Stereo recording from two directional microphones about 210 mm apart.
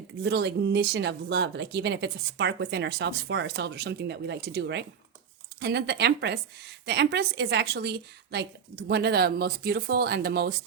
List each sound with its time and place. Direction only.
0.2 s speech: 55° right (ahead or behind)